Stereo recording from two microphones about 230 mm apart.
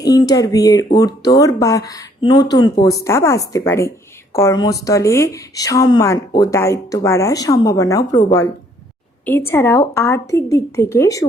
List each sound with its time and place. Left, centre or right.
0.0 s speech: centre